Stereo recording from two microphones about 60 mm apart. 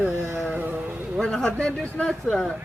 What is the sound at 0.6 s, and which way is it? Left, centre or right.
Speech, right.